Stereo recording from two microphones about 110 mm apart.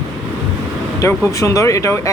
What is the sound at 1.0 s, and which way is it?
Speech, 25° left (ahead or behind).